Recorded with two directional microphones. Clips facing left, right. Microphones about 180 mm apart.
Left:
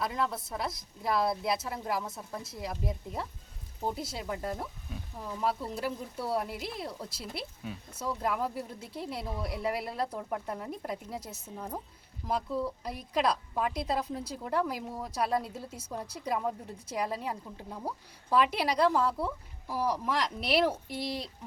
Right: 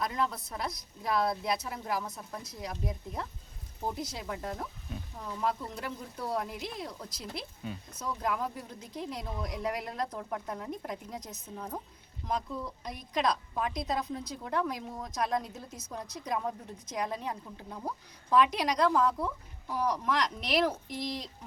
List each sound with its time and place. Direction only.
0.0 s a woman's voice: 5° left (ahead or behind)
2.0 s a woman's voice: 25° left (ahead or behind)
2.3 s a woman's voice: 5° left (ahead or behind)